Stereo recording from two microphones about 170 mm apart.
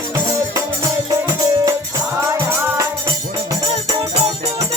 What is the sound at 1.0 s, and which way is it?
Music, 20° right (ahead or behind).